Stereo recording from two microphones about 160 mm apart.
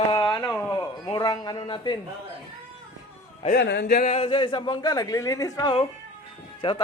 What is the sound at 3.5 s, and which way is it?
Speech, 90° left.